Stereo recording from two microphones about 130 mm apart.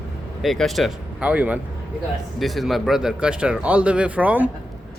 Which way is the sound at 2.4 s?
Centre (ahead or behind).